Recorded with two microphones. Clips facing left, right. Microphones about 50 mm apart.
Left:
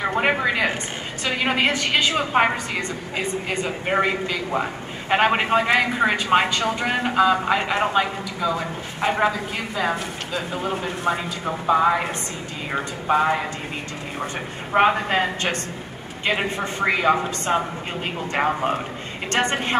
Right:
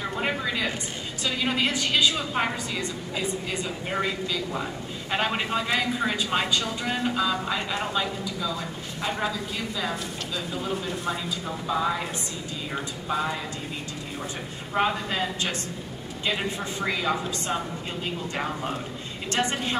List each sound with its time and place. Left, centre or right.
0.0 s a sound: left
1.2 s a man's voice: left
14.7 s a man's voice: left